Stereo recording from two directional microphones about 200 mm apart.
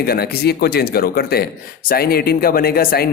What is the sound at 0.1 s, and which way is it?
Speech, 50° left (ahead or behind).